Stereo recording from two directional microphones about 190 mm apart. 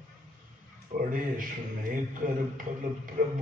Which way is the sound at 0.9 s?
45° right (ahead or behind).